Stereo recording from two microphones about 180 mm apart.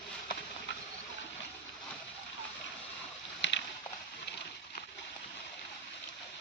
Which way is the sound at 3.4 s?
80° left.